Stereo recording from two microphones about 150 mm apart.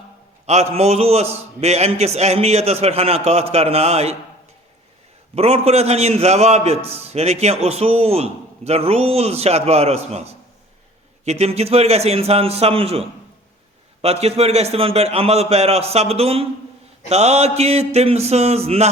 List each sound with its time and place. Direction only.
0.4 s a man's voice: 45° right (ahead or behind)
5.3 s a man's voice: 45° right (ahead or behind)
11.3 s a man's voice: 45° right (ahead or behind)